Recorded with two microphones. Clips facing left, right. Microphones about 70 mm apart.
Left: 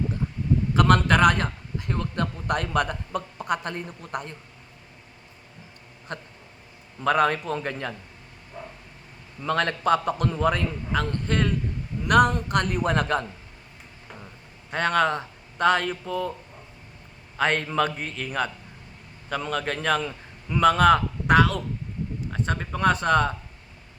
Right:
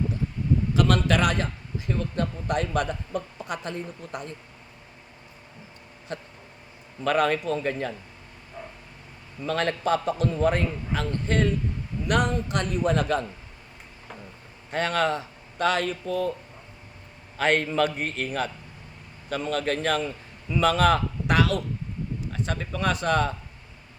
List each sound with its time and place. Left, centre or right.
0.7 s a man's voice: left
6.1 s a man's voice: left
7.5 s a man's voice: left
9.4 s a man's voice: left
14.7 s speech: left
17.3 s a man's voice: left
17.9 s a man's voice: right
18.3 s a man's voice: left
20.0 s a man's voice: left
20.6 s speech: left